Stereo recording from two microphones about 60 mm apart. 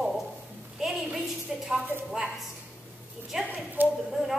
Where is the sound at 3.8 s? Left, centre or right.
Right.